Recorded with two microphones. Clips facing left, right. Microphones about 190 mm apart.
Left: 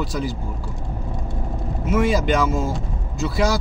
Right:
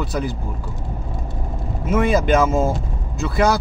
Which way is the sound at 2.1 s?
55° right (ahead or behind).